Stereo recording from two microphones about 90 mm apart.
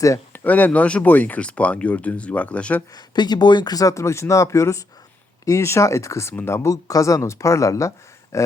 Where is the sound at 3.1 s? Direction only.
55° left (ahead or behind); by 6.7 s 30° left (ahead or behind).